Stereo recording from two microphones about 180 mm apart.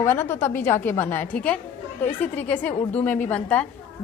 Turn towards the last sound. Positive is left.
turn(degrees=10)  # may be behind; listen again after turning